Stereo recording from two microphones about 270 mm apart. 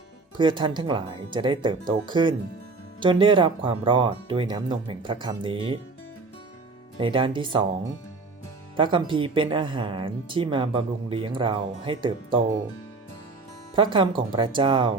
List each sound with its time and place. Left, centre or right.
0.3 s speech: centre
7.0 s speech: centre
8.7 s speech: centre
13.7 s speech: centre